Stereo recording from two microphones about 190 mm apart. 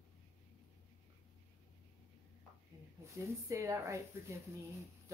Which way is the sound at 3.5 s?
15° right (ahead or behind).